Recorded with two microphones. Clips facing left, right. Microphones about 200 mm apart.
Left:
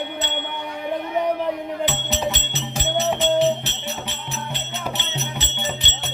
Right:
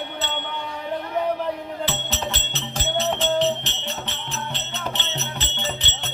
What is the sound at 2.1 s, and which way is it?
Music, 10° left (ahead or behind).